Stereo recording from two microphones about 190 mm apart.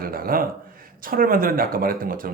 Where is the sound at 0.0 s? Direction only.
50° right (ahead or behind).